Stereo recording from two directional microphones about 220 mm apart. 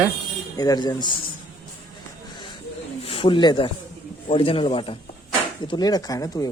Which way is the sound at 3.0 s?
25° left (ahead or behind).